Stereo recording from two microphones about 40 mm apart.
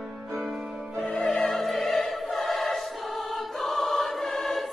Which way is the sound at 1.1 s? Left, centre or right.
Left.